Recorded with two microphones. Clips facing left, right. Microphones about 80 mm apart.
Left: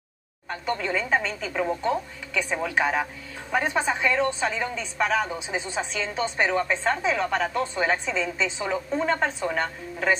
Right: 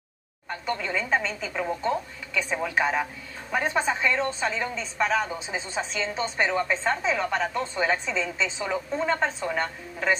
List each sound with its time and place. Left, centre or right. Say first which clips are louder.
0.5 s a woman's voice: left 2 dB; centre